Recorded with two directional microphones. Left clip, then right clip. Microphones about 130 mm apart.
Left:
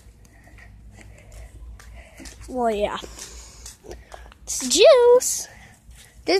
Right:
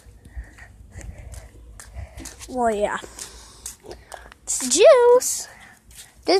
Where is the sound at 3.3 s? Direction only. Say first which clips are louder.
Even; centre (ahead or behind).